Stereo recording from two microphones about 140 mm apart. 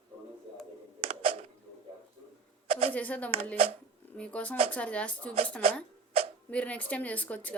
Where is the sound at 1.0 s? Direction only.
45° right (ahead or behind).